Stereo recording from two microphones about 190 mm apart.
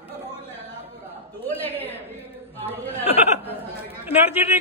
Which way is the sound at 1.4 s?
10° left (ahead or behind).